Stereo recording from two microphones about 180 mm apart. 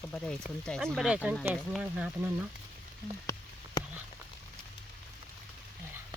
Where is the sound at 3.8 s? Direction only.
20° left (ahead or behind).